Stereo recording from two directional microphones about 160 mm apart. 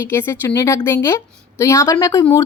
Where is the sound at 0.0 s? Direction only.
15° left (ahead or behind).